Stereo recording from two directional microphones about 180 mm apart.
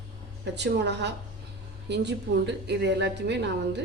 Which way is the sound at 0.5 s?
70° right (ahead or behind).